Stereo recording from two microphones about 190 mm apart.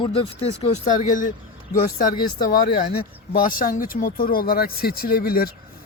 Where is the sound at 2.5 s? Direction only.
50° left (ahead or behind).